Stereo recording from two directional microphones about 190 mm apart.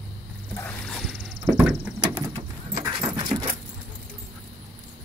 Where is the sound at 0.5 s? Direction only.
5° left (ahead or behind).